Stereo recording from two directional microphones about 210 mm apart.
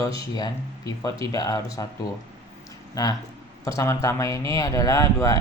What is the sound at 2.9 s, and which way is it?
Speech, 15° left (ahead or behind).